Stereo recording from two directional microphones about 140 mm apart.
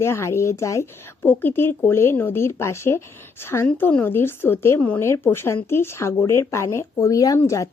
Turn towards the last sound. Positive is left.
turn(degrees=20)  # may be behind; listen again after turning